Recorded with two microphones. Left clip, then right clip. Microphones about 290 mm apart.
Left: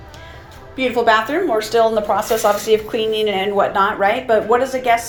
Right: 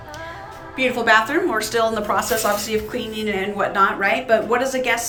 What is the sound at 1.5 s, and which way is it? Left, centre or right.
Speech, right.